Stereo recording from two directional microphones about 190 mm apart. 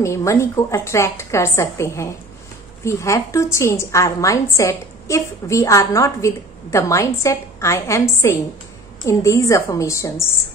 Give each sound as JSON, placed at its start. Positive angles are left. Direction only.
{"t": 0.0, "sound": "a woman's voice", "side_deg": 15}